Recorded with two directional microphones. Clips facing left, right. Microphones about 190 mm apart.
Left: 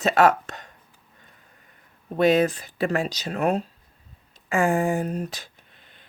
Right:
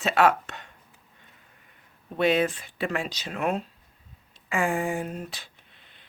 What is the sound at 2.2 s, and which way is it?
Speech, 40° left (ahead or behind).